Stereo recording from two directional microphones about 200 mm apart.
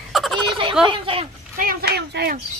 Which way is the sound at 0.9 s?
25° right (ahead or behind).